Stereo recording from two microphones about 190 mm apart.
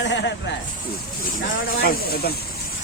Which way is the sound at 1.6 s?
50° left (ahead or behind).